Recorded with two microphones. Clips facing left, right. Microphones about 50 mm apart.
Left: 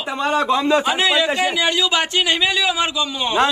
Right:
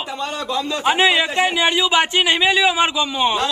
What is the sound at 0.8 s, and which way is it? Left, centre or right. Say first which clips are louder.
Speech: right 2 dB; right.